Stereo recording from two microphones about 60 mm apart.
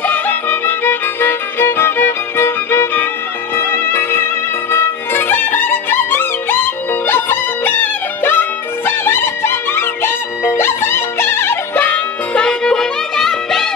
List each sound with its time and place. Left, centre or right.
0.0 s music: left
12.4 s music: centre